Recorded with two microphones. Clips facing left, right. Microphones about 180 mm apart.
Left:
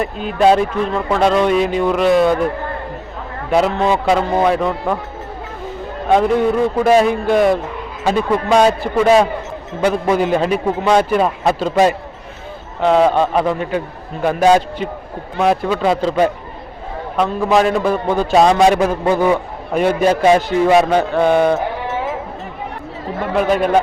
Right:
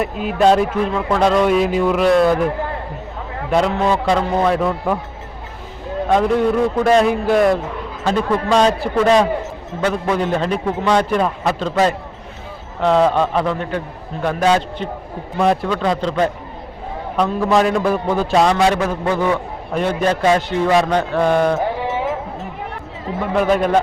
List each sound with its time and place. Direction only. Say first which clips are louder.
0.0 s speech: left 1 dB; 5° right (ahead or behind)
3.5 s speech: left 2 dB; 5° left (ahead or behind)
6.1 s a man's voice: left 1 dB; centre (ahead or behind)
18.3 s a man's voice: left 4 dB; 20° left (ahead or behind)
23.1 s speech: even; centre (ahead or behind)